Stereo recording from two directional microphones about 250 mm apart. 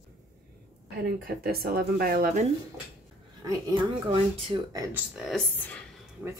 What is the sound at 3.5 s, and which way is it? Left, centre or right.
Speech, centre.